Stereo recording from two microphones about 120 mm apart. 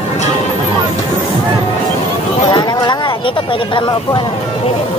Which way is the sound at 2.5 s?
40° left (ahead or behind).